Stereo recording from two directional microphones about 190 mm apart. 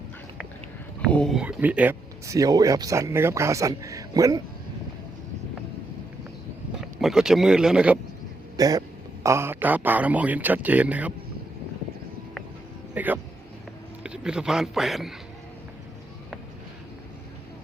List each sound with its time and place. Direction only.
1.1 s speech: centre (ahead or behind); by 4.4 s 20° right (ahead or behind)
7.0 s speech: 5° right (ahead or behind)
8.5 s speech: 20° right (ahead or behind)
12.9 s a sound: 10° right (ahead or behind)
14.0 s speech: 5° right (ahead or behind)